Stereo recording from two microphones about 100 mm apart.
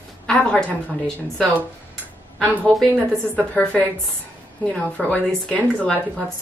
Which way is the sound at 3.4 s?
15° left (ahead or behind).